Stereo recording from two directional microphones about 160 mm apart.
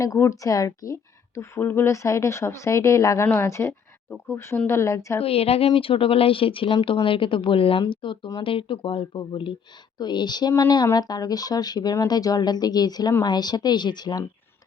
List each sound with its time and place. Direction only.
0.0 s speech: 20° left (ahead or behind)
5.2 s a woman's voice: 40° left (ahead or behind)